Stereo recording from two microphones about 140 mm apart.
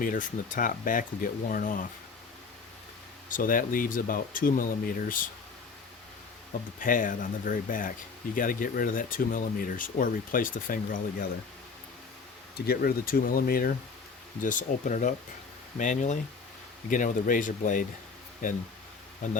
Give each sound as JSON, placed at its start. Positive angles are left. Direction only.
{"t": 0.0, "sound": "speech", "side_deg": 70}
{"t": 3.2, "sound": "speech", "side_deg": 75}
{"t": 6.7, "sound": "speech", "side_deg": 75}
{"t": 12.6, "sound": "speech", "side_deg": 90}
{"t": 14.4, "sound": "speech", "side_deg": 65}